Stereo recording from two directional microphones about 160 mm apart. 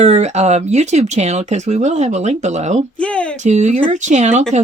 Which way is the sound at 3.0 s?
5° left (ahead or behind).